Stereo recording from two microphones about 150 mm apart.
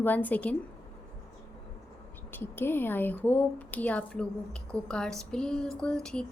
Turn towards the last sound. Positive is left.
turn(degrees=5)  # may be behind; listen again after turning